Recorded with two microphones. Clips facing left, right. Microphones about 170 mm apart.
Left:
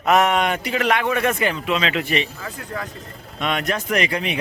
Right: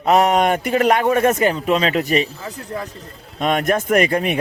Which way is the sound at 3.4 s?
45° right (ahead or behind).